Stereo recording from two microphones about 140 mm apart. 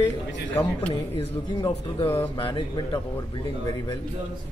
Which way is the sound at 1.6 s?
40° left (ahead or behind).